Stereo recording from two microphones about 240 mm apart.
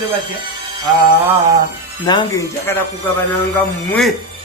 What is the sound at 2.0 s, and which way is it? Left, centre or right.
Speech, centre.